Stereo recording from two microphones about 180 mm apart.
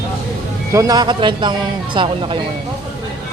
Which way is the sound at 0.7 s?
20° right (ahead or behind).